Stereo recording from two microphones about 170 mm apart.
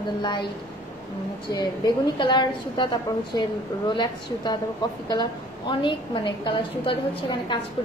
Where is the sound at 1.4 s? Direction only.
25° left (ahead or behind).